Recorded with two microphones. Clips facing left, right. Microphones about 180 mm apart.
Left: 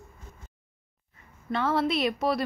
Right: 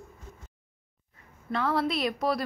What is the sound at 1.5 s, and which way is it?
Speech, centre (ahead or behind).